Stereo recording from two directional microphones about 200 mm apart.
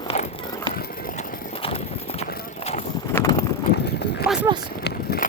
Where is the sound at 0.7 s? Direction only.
50° left (ahead or behind).